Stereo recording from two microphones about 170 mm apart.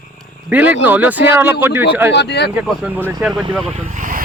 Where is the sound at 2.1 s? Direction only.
85° left.